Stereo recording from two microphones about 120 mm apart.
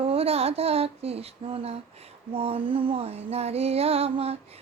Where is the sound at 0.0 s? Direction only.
55° right (ahead or behind).